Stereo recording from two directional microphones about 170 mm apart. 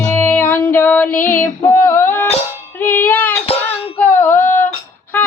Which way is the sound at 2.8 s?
10° left (ahead or behind).